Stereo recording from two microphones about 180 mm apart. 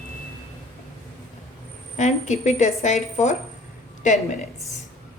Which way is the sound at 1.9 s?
40° left (ahead or behind).